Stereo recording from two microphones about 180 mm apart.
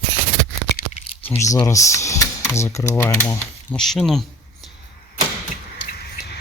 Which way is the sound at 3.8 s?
Centre (ahead or behind).